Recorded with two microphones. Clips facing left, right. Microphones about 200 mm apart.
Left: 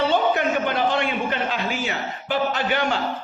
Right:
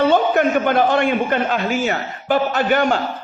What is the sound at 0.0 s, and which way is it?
A man's voice, 50° right (ahead or behind).